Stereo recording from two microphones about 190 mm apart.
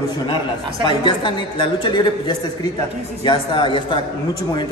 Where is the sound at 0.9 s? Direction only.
25° left (ahead or behind).